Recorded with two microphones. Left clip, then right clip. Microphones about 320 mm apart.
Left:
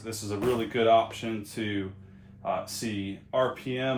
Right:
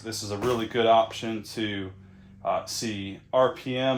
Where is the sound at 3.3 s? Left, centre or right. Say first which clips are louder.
Right 4 dB; right.